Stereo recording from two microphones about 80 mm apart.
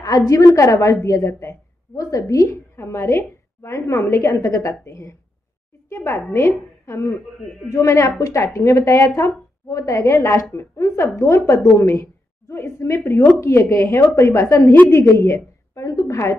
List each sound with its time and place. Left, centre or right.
0.3 s a woman's voice: left
15.3 s a woman's voice: left